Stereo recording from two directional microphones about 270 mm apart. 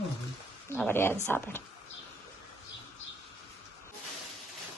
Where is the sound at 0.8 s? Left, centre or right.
Centre.